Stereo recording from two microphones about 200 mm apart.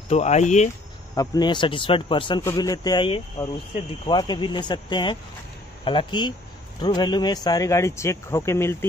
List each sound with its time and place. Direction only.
0.1 s speech: 35° left (ahead or behind)
1.1 s speech: 20° left (ahead or behind)